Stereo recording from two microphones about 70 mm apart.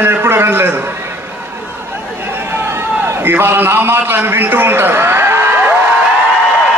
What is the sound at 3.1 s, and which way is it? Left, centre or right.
A man's voice, right.